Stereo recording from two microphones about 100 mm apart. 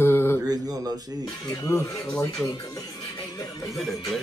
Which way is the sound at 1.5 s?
35° left (ahead or behind).